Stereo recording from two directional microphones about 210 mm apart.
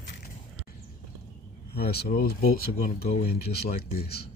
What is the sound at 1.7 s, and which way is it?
A man's voice, 50° left (ahead or behind).